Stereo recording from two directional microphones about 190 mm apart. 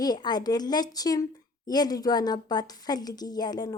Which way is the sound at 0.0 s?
20° left (ahead or behind).